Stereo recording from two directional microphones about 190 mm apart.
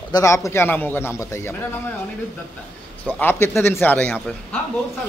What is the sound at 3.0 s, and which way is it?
A man's voice, 10° left (ahead or behind).